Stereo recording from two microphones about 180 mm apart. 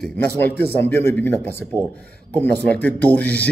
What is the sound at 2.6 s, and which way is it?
Speech, 5° left (ahead or behind).